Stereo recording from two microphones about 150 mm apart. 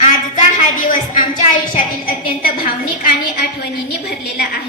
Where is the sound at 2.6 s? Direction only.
85° left.